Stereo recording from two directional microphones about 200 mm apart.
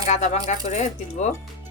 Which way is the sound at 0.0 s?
40° left (ahead or behind).